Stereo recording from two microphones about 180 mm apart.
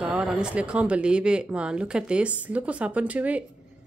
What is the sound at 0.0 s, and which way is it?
Speech, 5° right (ahead or behind).